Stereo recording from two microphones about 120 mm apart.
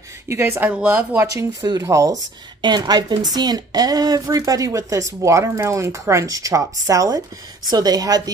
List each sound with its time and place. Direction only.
0.3 s speech: 20° right (ahead or behind)
1.3 s speech: 30° right (ahead or behind)
2.6 s a woman's voice: 35° right (ahead or behind)